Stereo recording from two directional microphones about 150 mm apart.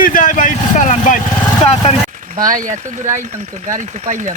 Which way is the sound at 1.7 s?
40° left (ahead or behind).